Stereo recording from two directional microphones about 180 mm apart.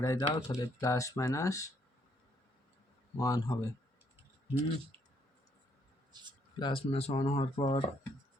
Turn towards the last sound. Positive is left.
turn(degrees=30)  # may be behind; listen again after turning